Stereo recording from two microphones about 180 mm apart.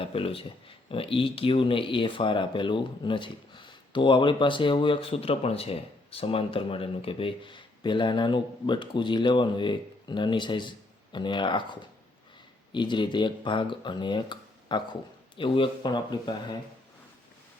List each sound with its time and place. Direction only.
0.0 s speech: 30° left (ahead or behind)